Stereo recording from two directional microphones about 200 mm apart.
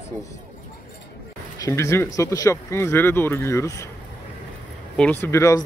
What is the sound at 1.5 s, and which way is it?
Speech, 15° left (ahead or behind).